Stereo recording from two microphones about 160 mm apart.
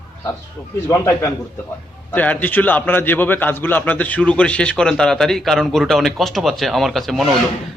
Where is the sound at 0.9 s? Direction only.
20° left (ahead or behind).